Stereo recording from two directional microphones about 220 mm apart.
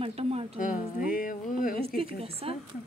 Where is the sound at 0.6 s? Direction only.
35° left (ahead or behind).